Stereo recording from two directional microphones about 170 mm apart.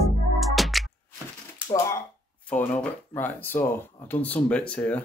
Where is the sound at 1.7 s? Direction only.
15° left (ahead or behind).